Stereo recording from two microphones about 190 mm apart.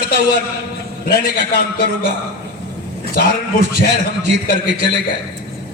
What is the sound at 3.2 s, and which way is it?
Speech, 60° left (ahead or behind).